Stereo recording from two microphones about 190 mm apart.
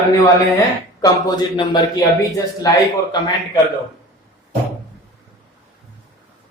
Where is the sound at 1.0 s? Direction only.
20° left (ahead or behind).